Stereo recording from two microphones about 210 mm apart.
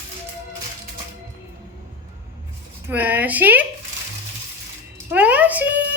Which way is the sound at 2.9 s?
10° right (ahead or behind).